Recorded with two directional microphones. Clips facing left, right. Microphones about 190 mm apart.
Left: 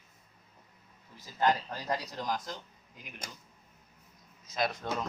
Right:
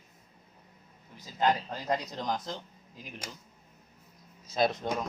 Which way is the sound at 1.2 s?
20° right (ahead or behind).